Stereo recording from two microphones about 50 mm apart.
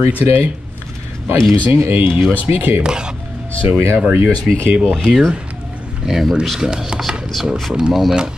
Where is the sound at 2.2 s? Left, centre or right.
Right.